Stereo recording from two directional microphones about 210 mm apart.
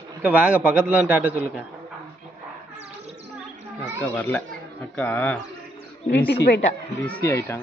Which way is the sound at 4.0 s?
10° left (ahead or behind).